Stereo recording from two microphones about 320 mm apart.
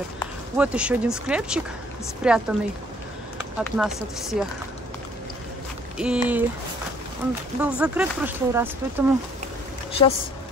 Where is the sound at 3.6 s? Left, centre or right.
Centre.